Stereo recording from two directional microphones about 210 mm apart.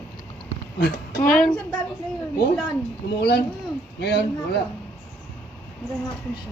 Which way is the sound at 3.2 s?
50° left (ahead or behind).